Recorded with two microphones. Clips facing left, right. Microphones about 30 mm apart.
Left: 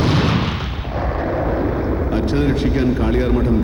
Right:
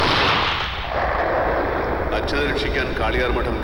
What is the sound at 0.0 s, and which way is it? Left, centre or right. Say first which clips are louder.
Artillery fire: right 1 dB; right.